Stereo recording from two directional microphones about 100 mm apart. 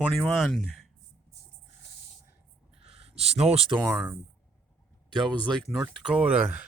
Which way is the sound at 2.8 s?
80° right.